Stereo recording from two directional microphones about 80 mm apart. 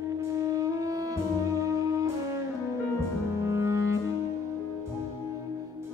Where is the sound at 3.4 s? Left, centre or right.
Right.